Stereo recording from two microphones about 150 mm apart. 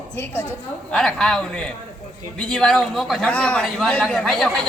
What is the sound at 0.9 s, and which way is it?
A man's voice, 5° left (ahead or behind).